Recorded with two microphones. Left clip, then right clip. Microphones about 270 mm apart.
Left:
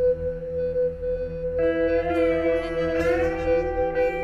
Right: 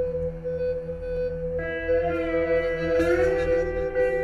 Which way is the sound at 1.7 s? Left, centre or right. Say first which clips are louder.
Right 1 dB; centre.